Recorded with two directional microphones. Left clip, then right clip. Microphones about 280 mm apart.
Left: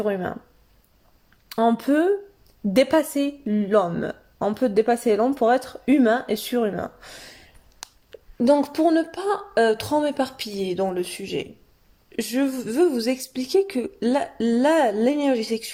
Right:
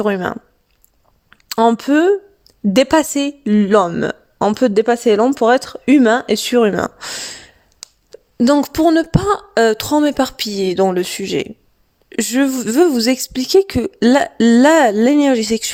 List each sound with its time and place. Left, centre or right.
0.0 s a woman's voice: right
1.5 s a woman's voice: right